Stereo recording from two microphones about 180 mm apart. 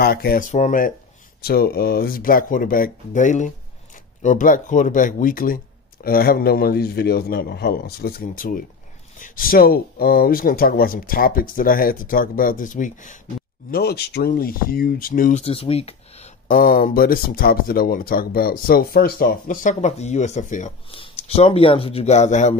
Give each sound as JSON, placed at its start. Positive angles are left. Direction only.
{"t": 0.0, "sound": "speech", "side_deg": 55}
{"t": 1.4, "sound": "a man's voice", "side_deg": 60}
{"t": 13.7, "sound": "a man's voice", "side_deg": 60}
{"t": 15.4, "sound": "speech", "side_deg": 35}
{"t": 16.4, "sound": "speech", "side_deg": 50}